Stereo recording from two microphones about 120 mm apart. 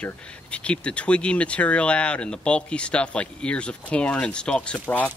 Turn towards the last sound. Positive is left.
turn(degrees=10)  # may be behind; listen again after turning